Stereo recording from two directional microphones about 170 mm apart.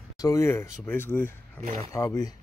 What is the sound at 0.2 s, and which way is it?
Speech, 20° left (ahead or behind).